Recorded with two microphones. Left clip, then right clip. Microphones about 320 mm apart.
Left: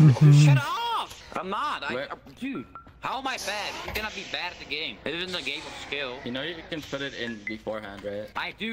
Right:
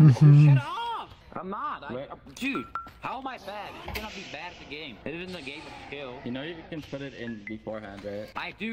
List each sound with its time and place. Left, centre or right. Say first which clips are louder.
0.0 s speech: even; centre
0.3 s a sound: left 2 dB; left
1.3 s speech: left 4 dB; left
2.4 s speech: right 5 dB; centre
3.2 s speech: left 6 dB; left
3.9 s speech: left 5 dB; centre
4.3 s speech: left 7 dB; left
6.2 s speech: left 4 dB; centre
7.7 s speech: left 3 dB; centre